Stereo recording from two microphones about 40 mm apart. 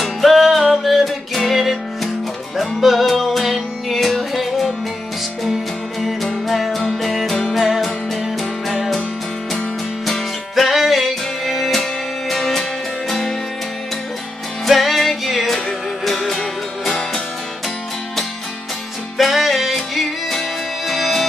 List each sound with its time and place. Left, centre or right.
0.0 s music: centre
7.5 s music: centre
10.0 s music: centre
11.7 s music: centre
14.7 s music: centre
19.1 s music: centre